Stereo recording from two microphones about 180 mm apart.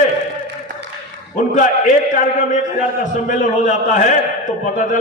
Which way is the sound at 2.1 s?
45° left (ahead or behind).